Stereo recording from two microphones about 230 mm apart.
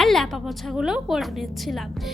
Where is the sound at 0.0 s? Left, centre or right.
Centre.